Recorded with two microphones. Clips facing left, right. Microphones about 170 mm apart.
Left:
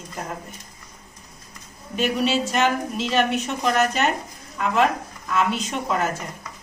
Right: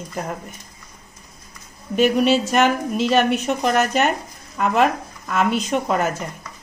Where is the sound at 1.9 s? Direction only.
55° right (ahead or behind).